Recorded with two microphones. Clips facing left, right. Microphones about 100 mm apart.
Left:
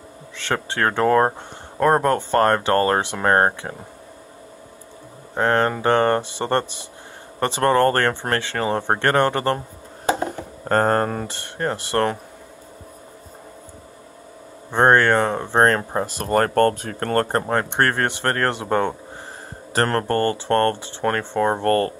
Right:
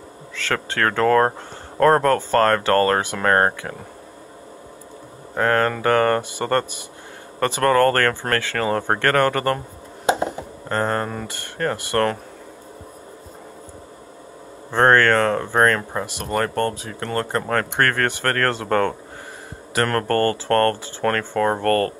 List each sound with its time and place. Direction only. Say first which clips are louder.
0.4 s speech: even; 20° left (ahead or behind)
5.3 s speech: even; 25° left (ahead or behind)
10.7 s speech: left 4 dB; 40° left (ahead or behind)
11.3 s speech: right 1 dB; 25° left (ahead or behind)
14.7 s speech: even; 20° left (ahead or behind); by 17.5 s 40° left (ahead or behind)
17.5 s speech: even; 20° left (ahead or behind)
19.7 s speech: even; 30° left (ahead or behind)